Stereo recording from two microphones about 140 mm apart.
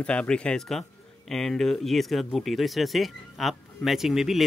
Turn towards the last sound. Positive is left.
turn(degrees=0)  # may be behind; listen again after turning